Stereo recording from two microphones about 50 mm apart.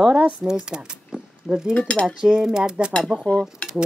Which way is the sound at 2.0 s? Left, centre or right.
Centre.